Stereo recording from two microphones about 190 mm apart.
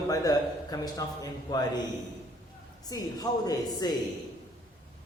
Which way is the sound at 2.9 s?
20° left (ahead or behind).